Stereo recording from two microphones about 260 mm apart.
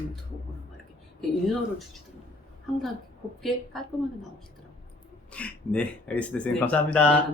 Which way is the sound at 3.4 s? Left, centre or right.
Centre.